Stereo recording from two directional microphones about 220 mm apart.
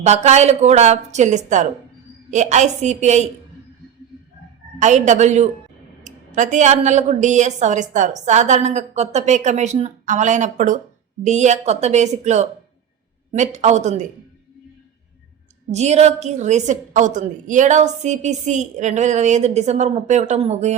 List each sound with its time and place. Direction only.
0.0 s a woman's voice: 30° right (ahead or behind)
4.8 s a woman's voice: 35° right (ahead or behind)
15.7 s a woman's voice: 30° right (ahead or behind)